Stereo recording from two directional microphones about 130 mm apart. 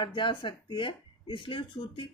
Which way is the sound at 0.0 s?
40° left (ahead or behind).